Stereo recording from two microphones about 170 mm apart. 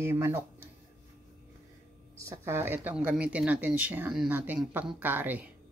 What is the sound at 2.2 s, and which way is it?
Speech, 15° right (ahead or behind).